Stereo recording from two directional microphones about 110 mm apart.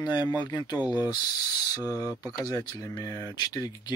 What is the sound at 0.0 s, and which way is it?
Speech, 40° left (ahead or behind).